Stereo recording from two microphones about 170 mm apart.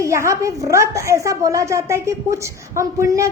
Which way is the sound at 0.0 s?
15° right (ahead or behind).